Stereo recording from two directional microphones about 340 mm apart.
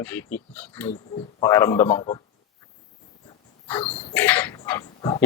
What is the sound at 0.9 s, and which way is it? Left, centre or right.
A man's voice, centre.